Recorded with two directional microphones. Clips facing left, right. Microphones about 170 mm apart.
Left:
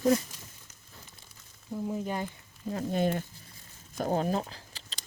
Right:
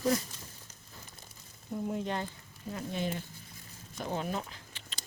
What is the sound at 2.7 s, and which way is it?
Speech, 45° left (ahead or behind).